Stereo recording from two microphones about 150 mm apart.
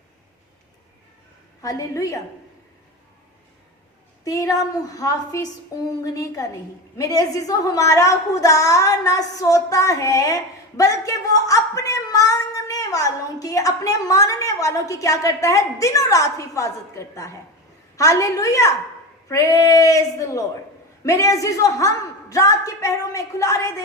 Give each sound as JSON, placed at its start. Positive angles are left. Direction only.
{"t": 1.6, "sound": "a woman's voice", "side_deg": 20}
{"t": 4.2, "sound": "a woman's voice", "side_deg": 25}